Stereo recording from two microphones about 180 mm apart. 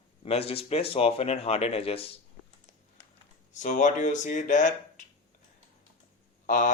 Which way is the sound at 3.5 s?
45° left (ahead or behind).